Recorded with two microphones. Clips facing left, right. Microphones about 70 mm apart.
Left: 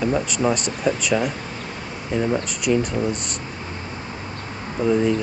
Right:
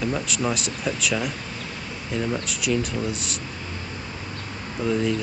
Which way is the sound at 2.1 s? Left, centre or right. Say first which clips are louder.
Left 5 dB; left.